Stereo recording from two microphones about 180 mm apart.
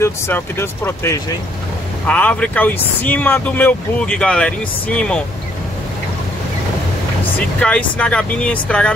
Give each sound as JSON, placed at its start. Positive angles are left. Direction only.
{"t": 0.0, "sound": "speech", "side_deg": 10}
{"t": 7.3, "sound": "speech", "side_deg": 5}